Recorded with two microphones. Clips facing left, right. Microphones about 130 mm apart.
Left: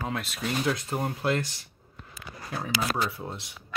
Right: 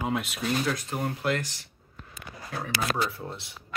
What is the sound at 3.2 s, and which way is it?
Speech, 15° left (ahead or behind).